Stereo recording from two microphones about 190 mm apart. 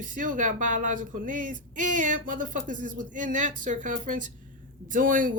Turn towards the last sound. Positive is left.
turn(degrees=-45)  # may be behind; listen again after turning